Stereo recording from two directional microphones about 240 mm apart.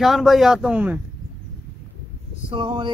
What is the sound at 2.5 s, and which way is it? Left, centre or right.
Speech, centre.